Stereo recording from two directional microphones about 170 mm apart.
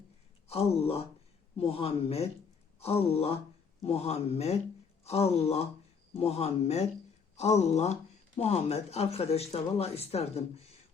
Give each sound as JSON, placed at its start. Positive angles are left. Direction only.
{"t": 0.4, "sound": "speech", "side_deg": 35}